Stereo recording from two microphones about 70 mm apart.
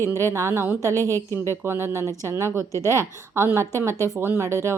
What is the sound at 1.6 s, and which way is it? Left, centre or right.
A woman's voice, right.